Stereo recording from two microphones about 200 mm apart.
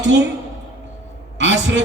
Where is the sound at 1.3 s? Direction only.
60° right (ahead or behind).